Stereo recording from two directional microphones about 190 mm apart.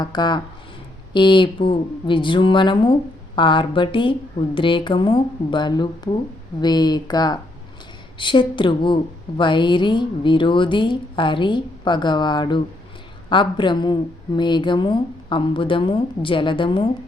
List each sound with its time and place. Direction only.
0.0 s speech: 20° left (ahead or behind)